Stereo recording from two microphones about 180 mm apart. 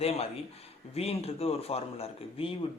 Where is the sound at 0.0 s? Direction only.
35° left (ahead or behind).